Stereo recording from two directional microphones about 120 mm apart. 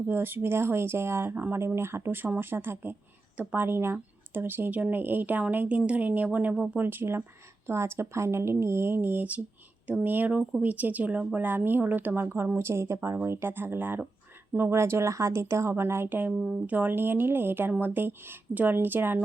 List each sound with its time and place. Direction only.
0.1 s speech: 20° right (ahead or behind)